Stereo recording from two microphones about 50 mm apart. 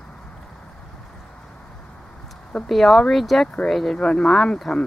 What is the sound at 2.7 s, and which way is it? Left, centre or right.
A woman's voice, centre.